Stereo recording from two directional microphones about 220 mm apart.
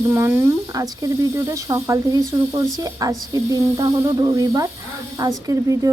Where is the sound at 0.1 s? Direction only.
10° right (ahead or behind).